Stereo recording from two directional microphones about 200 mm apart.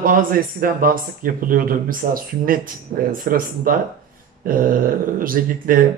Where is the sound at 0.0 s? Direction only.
45° right (ahead or behind).